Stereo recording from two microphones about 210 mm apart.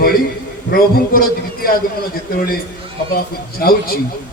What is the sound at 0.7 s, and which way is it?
A man's voice, 45° left (ahead or behind).